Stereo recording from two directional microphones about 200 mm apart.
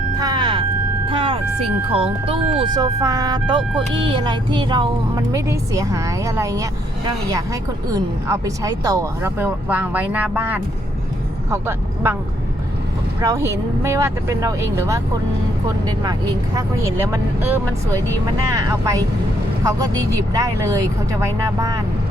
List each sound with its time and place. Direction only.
0.2 s a sound: 20° right (ahead or behind)
1.1 s vehicle: 25° right (ahead or behind)
1.9 s a woman's voice: 25° right (ahead or behind)
13.2 s a woman's voice: 15° right (ahead or behind)
16.6 s a woman's voice: 15° right (ahead or behind)